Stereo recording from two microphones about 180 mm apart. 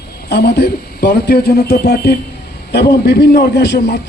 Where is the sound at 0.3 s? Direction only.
65° left (ahead or behind).